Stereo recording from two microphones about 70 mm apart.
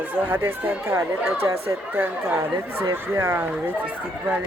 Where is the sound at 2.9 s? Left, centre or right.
Right.